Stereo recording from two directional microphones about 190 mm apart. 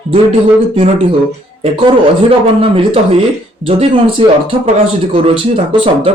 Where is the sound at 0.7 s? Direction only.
30° right (ahead or behind).